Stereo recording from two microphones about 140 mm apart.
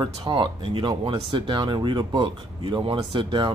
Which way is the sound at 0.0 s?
35° right (ahead or behind).